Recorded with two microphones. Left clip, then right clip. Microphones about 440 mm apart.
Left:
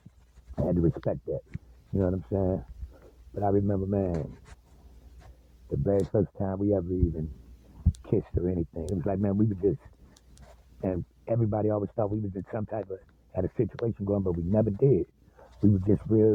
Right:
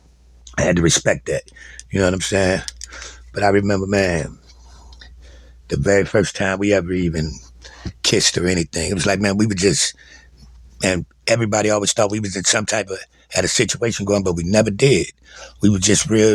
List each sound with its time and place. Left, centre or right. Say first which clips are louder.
0.5 s speech: right 12 dB; left
5.7 s speech: right 11 dB; left
10.8 s speech: right 12 dB; left